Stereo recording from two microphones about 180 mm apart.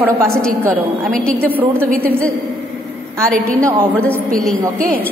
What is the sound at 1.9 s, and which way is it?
A woman's voice, 5° left (ahead or behind).